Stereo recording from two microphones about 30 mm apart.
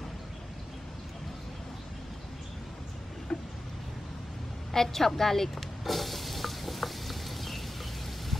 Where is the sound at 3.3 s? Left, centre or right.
Left.